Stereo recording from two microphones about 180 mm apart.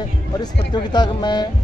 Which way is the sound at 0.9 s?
25° left (ahead or behind).